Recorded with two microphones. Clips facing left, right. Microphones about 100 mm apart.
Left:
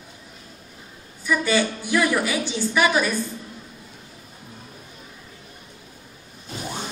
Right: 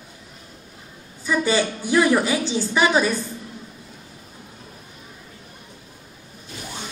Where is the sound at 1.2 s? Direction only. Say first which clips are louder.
Right 1 dB; 30° right (ahead or behind).